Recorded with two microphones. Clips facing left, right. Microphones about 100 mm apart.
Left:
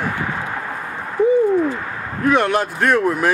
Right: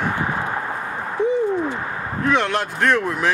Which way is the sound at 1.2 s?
50° left (ahead or behind).